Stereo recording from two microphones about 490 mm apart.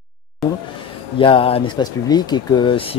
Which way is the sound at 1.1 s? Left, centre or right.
Centre.